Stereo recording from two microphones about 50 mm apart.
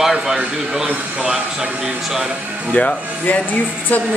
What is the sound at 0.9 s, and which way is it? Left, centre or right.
Speech, right.